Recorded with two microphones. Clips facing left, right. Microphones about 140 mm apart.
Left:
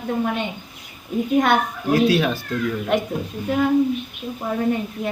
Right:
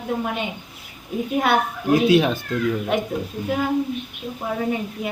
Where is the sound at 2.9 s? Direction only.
5° right (ahead or behind).